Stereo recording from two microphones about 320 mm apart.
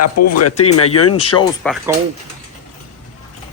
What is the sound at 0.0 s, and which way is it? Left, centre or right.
Speech, left.